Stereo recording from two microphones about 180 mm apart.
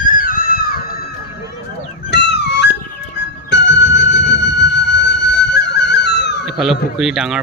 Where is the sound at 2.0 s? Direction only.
70° left (ahead or behind).